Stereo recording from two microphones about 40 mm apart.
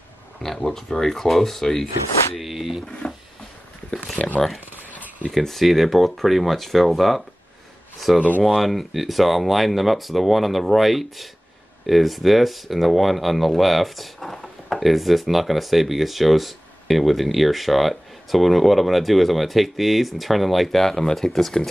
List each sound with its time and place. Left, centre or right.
0.4 s speech: centre
2.3 s speech: centre
3.0 s speech: left
4.2 s speech: left
5.3 s speech: centre